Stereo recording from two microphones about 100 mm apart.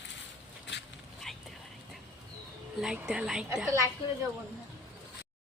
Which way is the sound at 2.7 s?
5° right (ahead or behind).